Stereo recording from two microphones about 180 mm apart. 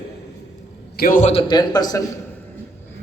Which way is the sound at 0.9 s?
50° left (ahead or behind).